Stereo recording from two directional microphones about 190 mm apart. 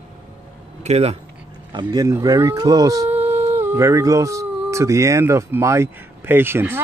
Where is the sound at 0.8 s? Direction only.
35° right (ahead or behind).